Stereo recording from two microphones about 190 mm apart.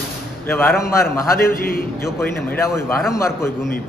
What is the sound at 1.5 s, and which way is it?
Speech, 50° left (ahead or behind).